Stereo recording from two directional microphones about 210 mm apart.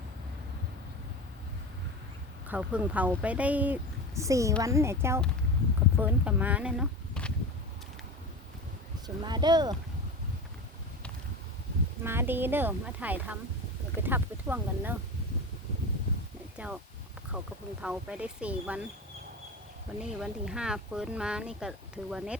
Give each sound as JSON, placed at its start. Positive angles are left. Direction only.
{"t": 2.5, "sound": "speech", "side_deg": -5}
{"t": 9.0, "sound": "speech", "side_deg": -20}
{"t": 12.0, "sound": "speech", "side_deg": -10}
{"t": 16.6, "sound": "speech", "side_deg": -5}
{"t": 20.0, "sound": "speech", "side_deg": -5}